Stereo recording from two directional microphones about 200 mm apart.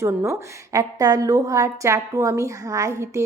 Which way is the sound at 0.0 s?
15° right (ahead or behind).